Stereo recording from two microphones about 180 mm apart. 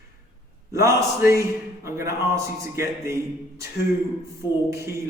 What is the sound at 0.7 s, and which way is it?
A man's voice, 15° right (ahead or behind).